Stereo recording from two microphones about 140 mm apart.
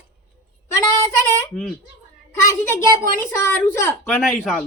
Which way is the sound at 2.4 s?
20° left (ahead or behind).